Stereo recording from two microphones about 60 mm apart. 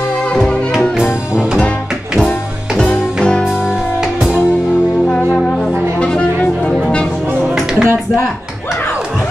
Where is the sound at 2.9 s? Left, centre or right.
Centre.